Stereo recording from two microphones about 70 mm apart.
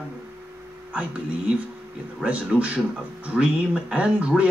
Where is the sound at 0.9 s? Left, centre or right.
Centre.